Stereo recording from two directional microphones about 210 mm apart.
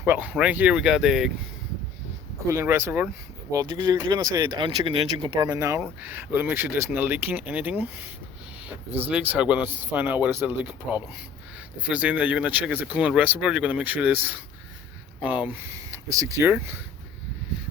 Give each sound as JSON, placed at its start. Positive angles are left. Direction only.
{"t": 0.0, "sound": "speech", "side_deg": -10}
{"t": 2.5, "sound": "speech", "side_deg": -15}
{"t": 5.5, "sound": "speech", "side_deg": -15}